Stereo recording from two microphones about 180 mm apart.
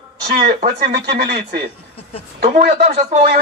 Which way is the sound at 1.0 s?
65° right (ahead or behind).